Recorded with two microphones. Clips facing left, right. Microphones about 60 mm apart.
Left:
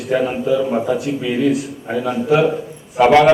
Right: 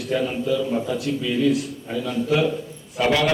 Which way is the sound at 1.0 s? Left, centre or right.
Left.